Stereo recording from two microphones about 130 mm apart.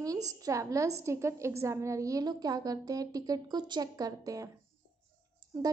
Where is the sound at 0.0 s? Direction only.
25° right (ahead or behind).